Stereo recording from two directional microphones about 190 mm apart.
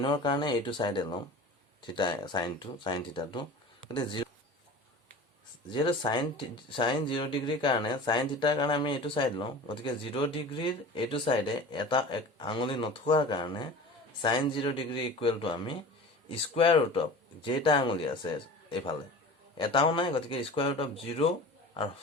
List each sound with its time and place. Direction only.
0.0 s speech: 25° left (ahead or behind)
5.6 s speech: 25° left (ahead or behind)
19.5 s speech: 25° left (ahead or behind)